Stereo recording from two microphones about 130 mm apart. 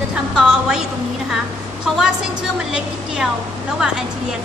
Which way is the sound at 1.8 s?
5° right (ahead or behind).